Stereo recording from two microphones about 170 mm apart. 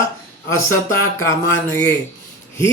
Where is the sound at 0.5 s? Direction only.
15° left (ahead or behind).